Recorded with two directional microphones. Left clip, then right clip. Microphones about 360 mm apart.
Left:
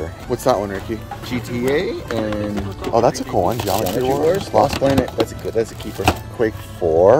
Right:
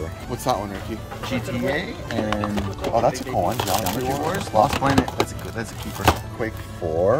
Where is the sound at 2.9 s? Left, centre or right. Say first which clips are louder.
Left 5 dB; left.